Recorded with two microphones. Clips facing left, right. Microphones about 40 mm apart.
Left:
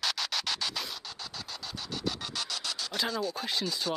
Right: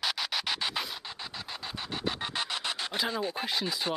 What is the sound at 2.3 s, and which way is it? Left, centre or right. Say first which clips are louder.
Scratch: right 3 dB; right.